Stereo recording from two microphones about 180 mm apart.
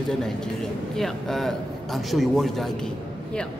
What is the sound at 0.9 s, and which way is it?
A man's voice, centre (ahead or behind).